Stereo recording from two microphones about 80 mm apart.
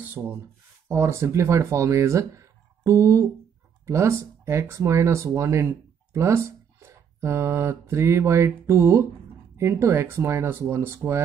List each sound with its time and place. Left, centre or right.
0.2 s speech: centre
0.8 s speech: right